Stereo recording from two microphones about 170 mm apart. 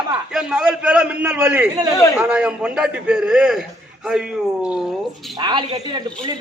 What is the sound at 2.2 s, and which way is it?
A man's voice, 5° right (ahead or behind).